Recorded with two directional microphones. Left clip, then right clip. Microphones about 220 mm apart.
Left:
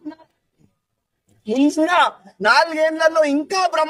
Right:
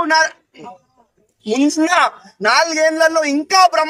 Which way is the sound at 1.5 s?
Centre (ahead or behind).